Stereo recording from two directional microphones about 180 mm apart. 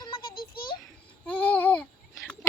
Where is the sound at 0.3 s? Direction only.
55° left (ahead or behind).